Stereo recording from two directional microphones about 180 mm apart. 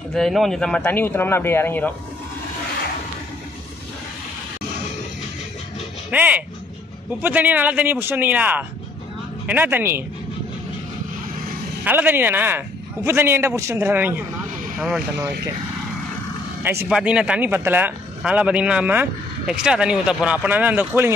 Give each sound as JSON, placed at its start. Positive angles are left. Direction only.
{"t": 0.1, "sound": "speech", "side_deg": 0}
{"t": 6.0, "sound": "speech", "side_deg": -10}
{"t": 11.8, "sound": "speech", "side_deg": -10}
{"t": 16.6, "sound": "speech", "side_deg": -10}